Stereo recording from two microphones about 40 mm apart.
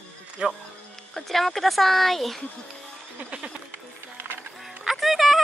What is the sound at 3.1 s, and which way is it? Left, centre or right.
Music, right.